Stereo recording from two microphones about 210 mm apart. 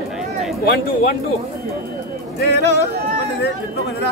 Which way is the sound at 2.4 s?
50° left (ahead or behind).